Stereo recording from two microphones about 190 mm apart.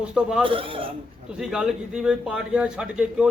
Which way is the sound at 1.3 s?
5° right (ahead or behind).